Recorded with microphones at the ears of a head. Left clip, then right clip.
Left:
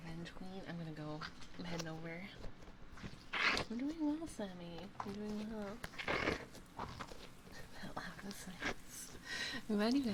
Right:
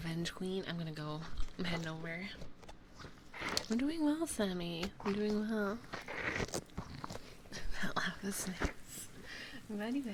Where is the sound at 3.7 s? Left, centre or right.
Right.